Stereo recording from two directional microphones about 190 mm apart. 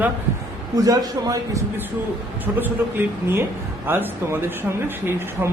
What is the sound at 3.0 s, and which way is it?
Speech, 10° right (ahead or behind).